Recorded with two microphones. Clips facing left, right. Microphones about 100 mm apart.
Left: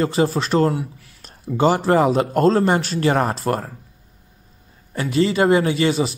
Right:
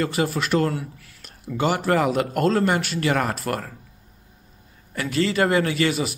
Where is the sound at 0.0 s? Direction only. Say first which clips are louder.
Left 4 dB; 30° left (ahead or behind).